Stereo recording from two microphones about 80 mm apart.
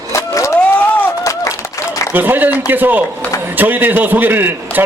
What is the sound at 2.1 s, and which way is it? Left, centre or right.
A man's voice, right.